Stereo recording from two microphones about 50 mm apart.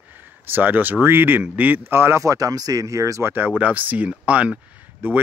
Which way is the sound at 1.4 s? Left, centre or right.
Right.